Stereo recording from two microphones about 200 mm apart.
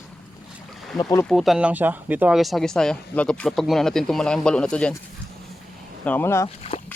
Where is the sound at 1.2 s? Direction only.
Centre (ahead or behind).